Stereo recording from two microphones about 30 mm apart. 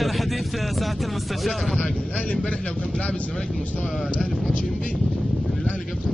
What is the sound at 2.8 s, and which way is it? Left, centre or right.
Speech, left.